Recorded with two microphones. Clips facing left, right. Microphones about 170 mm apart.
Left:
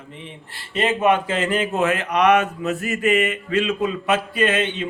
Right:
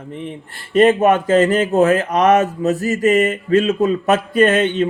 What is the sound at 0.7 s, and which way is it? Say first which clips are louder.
Speech: right 7 dB; 45° right (ahead or behind).